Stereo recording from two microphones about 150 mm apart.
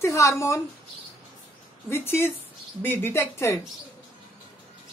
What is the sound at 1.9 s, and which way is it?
Speech, 15° left (ahead or behind).